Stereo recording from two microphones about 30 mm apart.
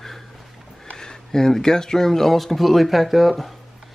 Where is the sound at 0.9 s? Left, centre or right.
Left; by 3.5 s centre.